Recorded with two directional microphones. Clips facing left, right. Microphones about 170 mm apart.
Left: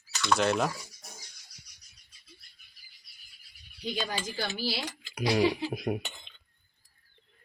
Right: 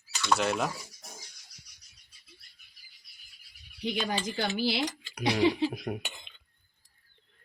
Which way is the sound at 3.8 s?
20° right (ahead or behind).